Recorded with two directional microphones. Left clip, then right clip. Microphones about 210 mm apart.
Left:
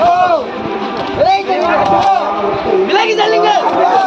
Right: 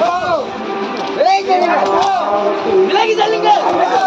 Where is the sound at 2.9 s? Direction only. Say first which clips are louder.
Left 2 dB; 35° left (ahead or behind).